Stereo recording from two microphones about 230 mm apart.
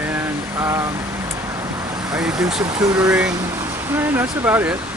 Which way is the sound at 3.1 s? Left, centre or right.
Centre.